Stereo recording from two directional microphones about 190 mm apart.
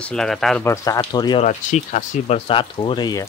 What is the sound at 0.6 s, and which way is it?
Speech, 15° left (ahead or behind).